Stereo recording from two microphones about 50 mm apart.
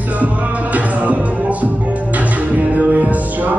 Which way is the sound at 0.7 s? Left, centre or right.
Right.